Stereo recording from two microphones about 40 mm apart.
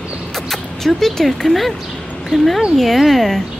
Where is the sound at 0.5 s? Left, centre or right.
Centre.